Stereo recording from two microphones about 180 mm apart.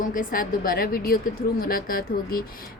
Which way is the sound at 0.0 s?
50° left (ahead or behind).